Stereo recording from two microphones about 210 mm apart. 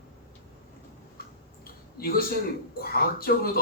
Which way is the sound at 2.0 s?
45° left (ahead or behind).